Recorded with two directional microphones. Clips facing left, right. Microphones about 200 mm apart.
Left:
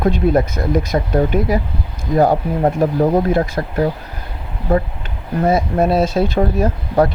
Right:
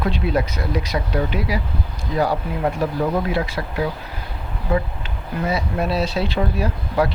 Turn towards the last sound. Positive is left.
turn(degrees=45)  # may be behind; listen again after turning